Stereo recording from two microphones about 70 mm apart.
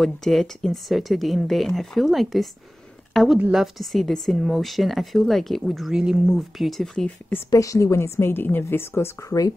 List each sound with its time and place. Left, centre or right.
0.0 s speech: centre
3.1 s a sound: centre
3.5 s speech: centre
6.3 s speech: centre
7.5 s a woman's voice: left